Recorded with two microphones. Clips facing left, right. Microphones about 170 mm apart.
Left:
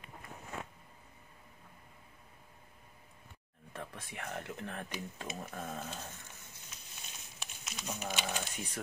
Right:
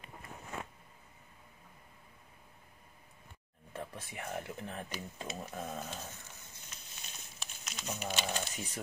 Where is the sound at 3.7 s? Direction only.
10° right (ahead or behind).